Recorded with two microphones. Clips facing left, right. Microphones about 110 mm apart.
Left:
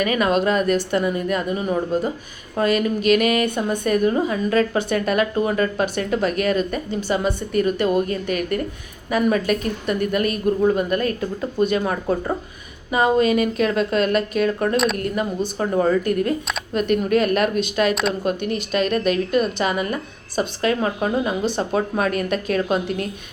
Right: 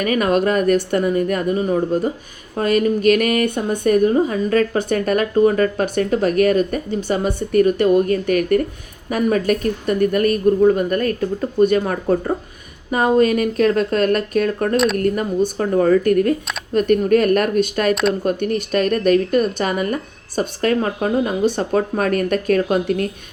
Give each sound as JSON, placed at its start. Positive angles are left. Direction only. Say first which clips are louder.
{"t": 0.0, "sound": "a woman's voice", "louder": "right 2 dB", "side_deg": -45}
{"t": 3.8, "sound": "a woman's voice", "louder": "right 5 dB", "side_deg": -40}